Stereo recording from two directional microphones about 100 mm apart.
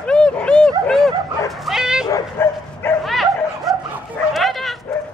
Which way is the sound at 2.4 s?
25° left (ahead or behind).